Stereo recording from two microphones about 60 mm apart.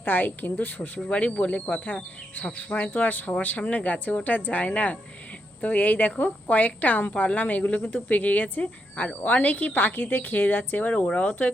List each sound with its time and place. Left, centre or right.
0.0 s speech: left
0.8 s a woman's voice: centre